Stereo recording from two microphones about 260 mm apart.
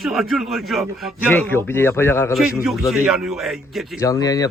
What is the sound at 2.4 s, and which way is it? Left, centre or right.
Speech, centre.